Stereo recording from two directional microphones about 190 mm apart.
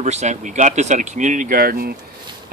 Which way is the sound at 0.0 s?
35° right (ahead or behind).